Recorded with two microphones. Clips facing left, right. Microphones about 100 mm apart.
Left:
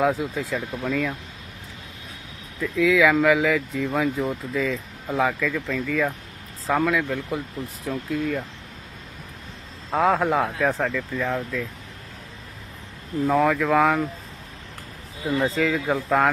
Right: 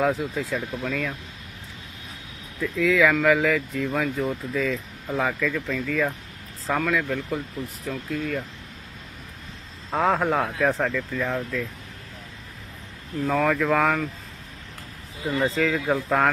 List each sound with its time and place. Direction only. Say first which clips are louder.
0.5 s speech: left 2 dB; 5° left (ahead or behind)
2.6 s speech: left 1 dB; centre (ahead or behind)
3.9 s speech: left 2 dB; 15° left (ahead or behind)
5.2 s speech: left 2 dB; centre (ahead or behind)
7.2 s speech: even; 15° left (ahead or behind)
7.9 s speech: left 3 dB; 5° left (ahead or behind)
9.9 s speech: left 2 dB; centre (ahead or behind)
13.2 s speech: left 2 dB; 5° left (ahead or behind)
15.3 s speech: left 1 dB; centre (ahead or behind)